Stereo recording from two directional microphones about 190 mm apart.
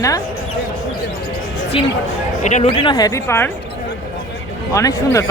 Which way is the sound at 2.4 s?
40° left (ahead or behind).